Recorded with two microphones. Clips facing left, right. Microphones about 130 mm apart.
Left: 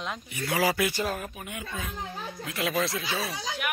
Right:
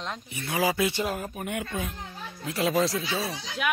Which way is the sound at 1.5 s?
65° right (ahead or behind).